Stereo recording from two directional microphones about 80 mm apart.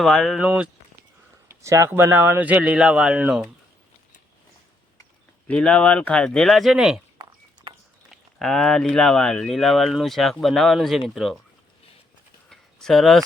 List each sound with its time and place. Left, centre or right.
0.0 s speech: centre
0.3 s speech: centre
1.5 s a sound: right
1.9 s speech: right
2.4 s speech: centre
5.5 s speech: centre
8.1 s speech: centre
12.5 s a sound: centre